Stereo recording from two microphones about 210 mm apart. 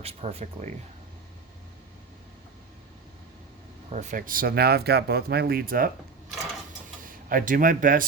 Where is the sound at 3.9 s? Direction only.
35° right (ahead or behind).